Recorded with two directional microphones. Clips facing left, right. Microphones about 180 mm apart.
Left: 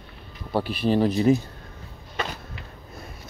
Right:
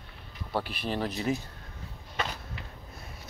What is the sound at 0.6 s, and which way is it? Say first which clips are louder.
Speech: left 11 dB; 35° left (ahead or behind).